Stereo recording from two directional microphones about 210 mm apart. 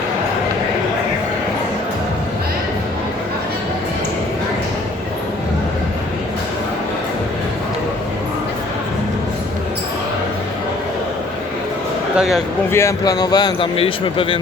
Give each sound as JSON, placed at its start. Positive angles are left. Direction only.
{"t": 12.1, "sound": "speech", "side_deg": 0}
{"t": 12.7, "sound": "speech", "side_deg": 15}